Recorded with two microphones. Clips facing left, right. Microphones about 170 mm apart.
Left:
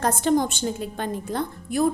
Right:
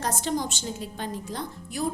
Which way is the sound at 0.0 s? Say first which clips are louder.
Left 7 dB; 55° left (ahead or behind).